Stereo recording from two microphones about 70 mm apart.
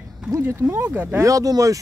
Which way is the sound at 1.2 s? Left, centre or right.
Right.